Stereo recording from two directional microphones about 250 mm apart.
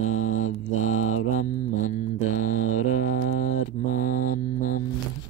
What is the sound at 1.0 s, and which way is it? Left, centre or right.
Mantra, left.